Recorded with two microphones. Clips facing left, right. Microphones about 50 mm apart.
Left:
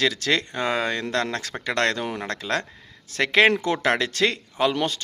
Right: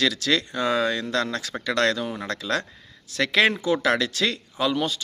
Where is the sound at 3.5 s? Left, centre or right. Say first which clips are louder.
Even; left.